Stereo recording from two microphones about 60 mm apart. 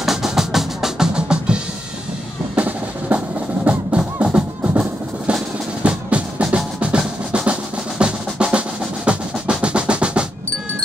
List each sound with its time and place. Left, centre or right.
0.0 s music: centre
2.5 s drum: right
3.6 s music: centre
8.0 s music: centre